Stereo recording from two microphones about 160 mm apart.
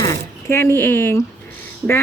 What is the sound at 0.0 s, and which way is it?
Speech, 20° left (ahead or behind).